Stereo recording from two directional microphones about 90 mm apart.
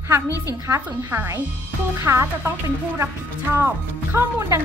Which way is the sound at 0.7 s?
30° right (ahead or behind).